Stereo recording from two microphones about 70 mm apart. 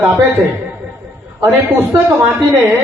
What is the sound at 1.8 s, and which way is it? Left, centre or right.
Speech, right.